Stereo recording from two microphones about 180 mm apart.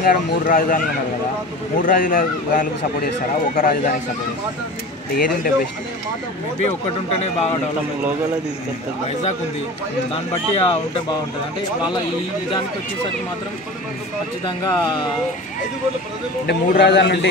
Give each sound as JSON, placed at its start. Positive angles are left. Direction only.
{"t": 0.0, "sound": "speech", "side_deg": 50}
{"t": 5.1, "sound": "speech", "side_deg": 55}
{"t": 7.2, "sound": "speech", "side_deg": 35}
{"t": 10.1, "sound": "speech", "side_deg": 35}
{"t": 14.6, "sound": "speech", "side_deg": 20}
{"t": 16.4, "sound": "a man's voice", "side_deg": 70}